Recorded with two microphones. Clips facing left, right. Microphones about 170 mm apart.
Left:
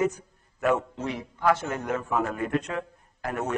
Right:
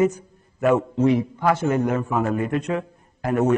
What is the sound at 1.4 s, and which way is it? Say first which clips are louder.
A man's voice: right 4 dB; 10° right (ahead or behind).